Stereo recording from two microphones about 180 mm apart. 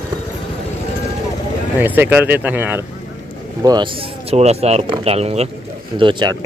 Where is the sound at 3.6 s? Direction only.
25° right (ahead or behind).